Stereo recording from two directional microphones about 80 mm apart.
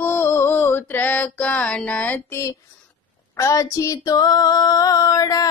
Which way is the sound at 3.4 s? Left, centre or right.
Left.